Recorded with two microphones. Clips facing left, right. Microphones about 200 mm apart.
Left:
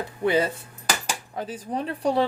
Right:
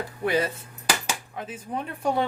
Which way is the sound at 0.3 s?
25° left (ahead or behind).